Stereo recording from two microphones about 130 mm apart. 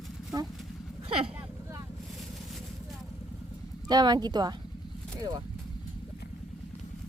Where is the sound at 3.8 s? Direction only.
30° right (ahead or behind).